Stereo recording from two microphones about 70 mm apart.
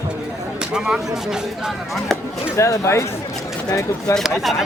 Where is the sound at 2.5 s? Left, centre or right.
Left.